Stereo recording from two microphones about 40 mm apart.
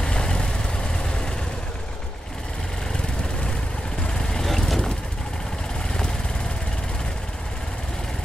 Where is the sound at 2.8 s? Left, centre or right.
Left.